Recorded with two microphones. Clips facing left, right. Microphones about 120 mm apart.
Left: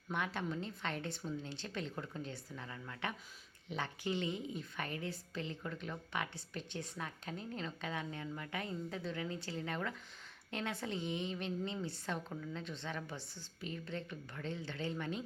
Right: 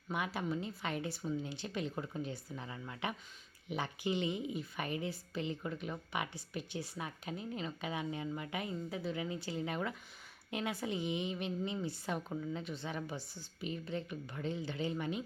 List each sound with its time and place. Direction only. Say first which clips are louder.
0.1 s a woman's voice: right 2 dB; 10° right (ahead or behind)